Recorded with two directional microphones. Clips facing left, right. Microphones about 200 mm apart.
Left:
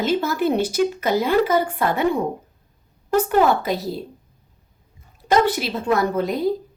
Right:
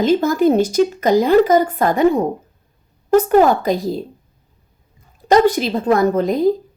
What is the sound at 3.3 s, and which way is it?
Speech, 45° right (ahead or behind).